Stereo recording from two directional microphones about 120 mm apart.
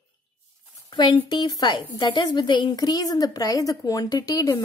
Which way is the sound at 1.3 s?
35° left (ahead or behind).